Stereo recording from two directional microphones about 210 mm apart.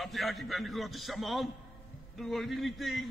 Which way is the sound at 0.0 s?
Centre (ahead or behind).